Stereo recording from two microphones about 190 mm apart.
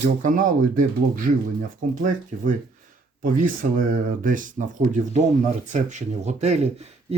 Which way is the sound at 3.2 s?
45° right (ahead or behind).